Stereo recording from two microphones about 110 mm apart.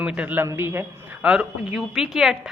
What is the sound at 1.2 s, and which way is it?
A woman's voice, 10° right (ahead or behind).